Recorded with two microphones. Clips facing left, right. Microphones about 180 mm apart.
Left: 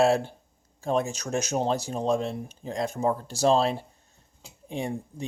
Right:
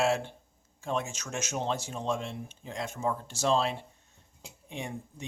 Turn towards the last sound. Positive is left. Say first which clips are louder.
# left 7 dB
turn(degrees=35)  # may be behind; listen again after turning